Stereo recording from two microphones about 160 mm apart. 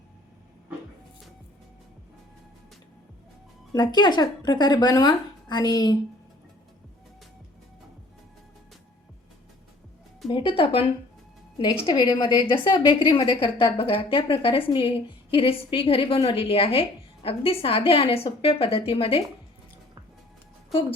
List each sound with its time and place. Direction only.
3.7 s speech: 25° left (ahead or behind)
10.2 s a woman's voice: 35° left (ahead or behind)
11.9 s a woman's voice: 30° left (ahead or behind)